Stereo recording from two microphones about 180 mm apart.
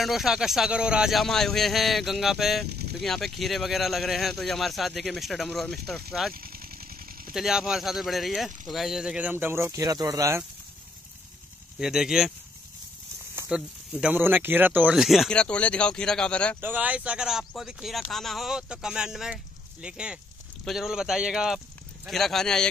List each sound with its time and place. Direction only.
0.0 s speech: centre (ahead or behind)
2.7 s vehicle: 65° right (ahead or behind)
3.0 s speech: centre (ahead or behind)
6.3 s engine: 55° right (ahead or behind)
7.3 s speech: 5° right (ahead or behind); by 10.4 s 20° right (ahead or behind)
11.8 s speech: centre (ahead or behind)
16.6 s speech: 10° right (ahead or behind)